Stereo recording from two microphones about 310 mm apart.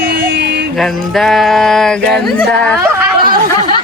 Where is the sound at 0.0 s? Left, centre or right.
Right.